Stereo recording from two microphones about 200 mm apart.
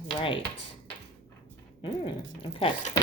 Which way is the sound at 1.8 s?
25° left (ahead or behind).